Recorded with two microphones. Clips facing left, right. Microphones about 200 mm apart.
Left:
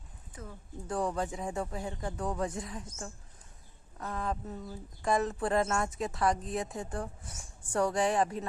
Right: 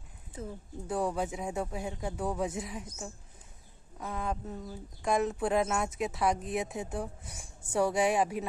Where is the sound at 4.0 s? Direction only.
Centre (ahead or behind).